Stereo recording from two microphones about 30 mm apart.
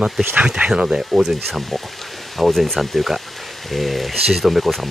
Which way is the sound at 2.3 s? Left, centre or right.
Centre.